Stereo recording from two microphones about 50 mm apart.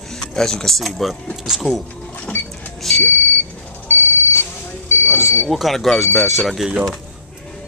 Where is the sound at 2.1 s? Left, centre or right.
Left.